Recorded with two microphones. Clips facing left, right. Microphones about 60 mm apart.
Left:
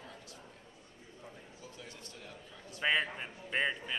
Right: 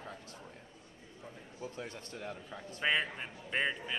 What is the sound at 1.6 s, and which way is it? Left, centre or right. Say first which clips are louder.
A man's voice: right 10 dB; right.